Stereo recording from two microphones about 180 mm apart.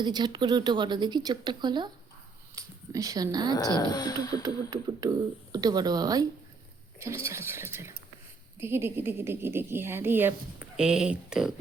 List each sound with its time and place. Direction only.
0.0 s speech: 25° right (ahead or behind)
3.5 s speech: 20° left (ahead or behind)
4.7 s a woman's voice: 20° right (ahead or behind); by 11.5 s 5° right (ahead or behind)